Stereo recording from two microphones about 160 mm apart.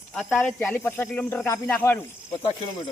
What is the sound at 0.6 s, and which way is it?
Speech, 15° left (ahead or behind).